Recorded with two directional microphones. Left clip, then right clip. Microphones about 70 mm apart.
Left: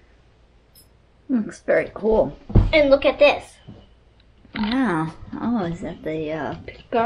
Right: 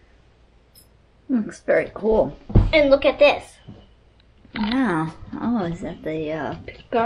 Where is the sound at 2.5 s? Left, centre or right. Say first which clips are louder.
Even; right.